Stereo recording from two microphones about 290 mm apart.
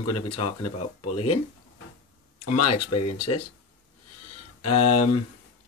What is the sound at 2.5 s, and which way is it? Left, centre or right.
Speech, left.